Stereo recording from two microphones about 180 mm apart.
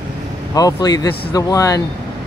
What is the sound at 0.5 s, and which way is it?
Speech, 20° left (ahead or behind).